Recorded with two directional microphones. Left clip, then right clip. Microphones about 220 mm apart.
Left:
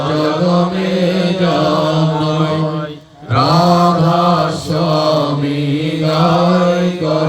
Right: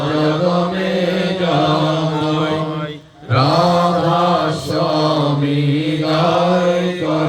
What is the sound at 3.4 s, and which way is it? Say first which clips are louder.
Mantra: left 3 dB; 50° left (ahead or behind).